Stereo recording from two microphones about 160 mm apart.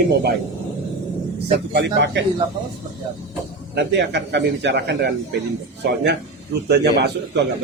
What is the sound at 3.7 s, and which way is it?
Speech, 90° right.